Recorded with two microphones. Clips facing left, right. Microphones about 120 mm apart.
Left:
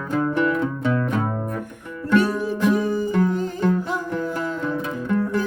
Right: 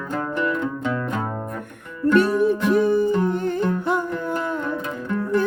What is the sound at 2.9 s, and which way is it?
Music, 60° right (ahead or behind).